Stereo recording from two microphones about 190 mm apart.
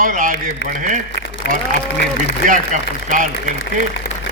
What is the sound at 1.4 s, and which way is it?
Speech, 60° left (ahead or behind).